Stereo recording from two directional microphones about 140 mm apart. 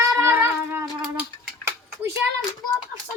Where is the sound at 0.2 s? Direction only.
15° right (ahead or behind).